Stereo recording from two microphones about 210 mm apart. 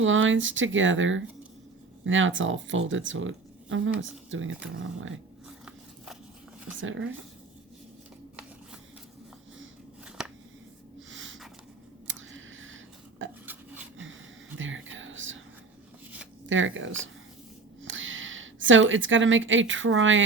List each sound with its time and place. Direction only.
0.0 s speech: 65° right (ahead or behind)
6.7 s speech: 65° right (ahead or behind)
10.2 s a sound: 5° right (ahead or behind)
11.1 s snort: 65° right (ahead or behind)
12.0 s a sound: 65° right (ahead or behind)
14.6 s whispering: 65° right (ahead or behind)
16.5 s a woman's voice: 65° right (ahead or behind)